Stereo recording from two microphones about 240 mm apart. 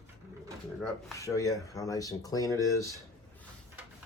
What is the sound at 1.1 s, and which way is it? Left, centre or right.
Speech, centre.